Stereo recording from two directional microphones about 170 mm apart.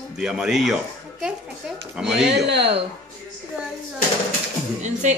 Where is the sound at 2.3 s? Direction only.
85° right.